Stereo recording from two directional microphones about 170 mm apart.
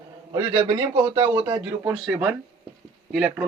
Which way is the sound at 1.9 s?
10° right (ahead or behind).